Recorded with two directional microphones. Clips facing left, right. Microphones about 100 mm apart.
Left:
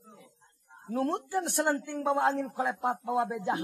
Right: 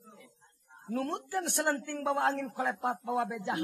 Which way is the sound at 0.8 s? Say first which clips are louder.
Left 4 dB; 30° left (ahead or behind).